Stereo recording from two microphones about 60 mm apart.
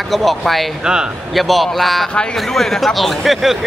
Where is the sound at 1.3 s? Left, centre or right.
Centre.